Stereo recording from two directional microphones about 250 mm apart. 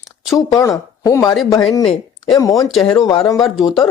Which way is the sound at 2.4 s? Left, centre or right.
Centre.